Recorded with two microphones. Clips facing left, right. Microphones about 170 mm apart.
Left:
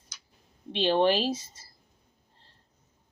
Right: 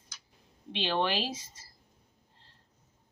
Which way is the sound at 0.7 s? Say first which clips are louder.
Left 6 dB; 40° left (ahead or behind).